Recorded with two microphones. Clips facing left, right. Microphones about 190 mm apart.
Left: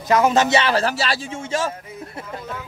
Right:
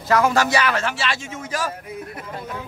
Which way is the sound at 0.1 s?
20° left (ahead or behind).